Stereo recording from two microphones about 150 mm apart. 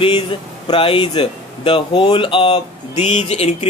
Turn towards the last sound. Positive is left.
turn(degrees=45)  # may be behind; listen again after turning